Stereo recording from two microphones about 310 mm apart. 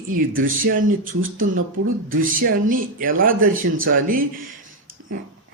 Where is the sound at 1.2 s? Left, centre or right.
Right.